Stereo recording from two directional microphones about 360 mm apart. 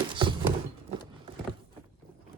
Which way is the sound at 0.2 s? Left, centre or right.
Centre.